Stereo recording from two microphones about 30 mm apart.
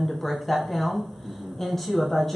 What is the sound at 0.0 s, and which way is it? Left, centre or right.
Speech, centre.